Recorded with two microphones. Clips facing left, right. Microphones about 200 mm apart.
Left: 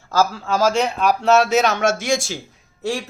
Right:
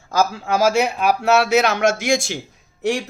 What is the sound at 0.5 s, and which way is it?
Speech, 10° right (ahead or behind).